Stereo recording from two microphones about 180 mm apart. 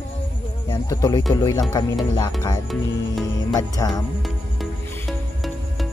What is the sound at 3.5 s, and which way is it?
Speech, 20° left (ahead or behind).